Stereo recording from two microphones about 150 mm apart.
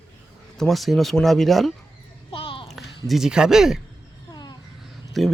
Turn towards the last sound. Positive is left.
turn(degrees=0)  # may be behind; listen again after turning